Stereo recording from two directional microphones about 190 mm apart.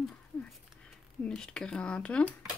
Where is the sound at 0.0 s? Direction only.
5° left (ahead or behind).